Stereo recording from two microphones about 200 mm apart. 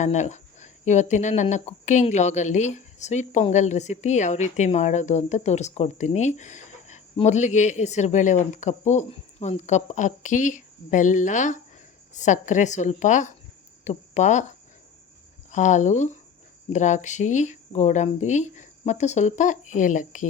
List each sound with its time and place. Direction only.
0.0 s speech: 35° left (ahead or behind)
15.5 s speech: 35° left (ahead or behind)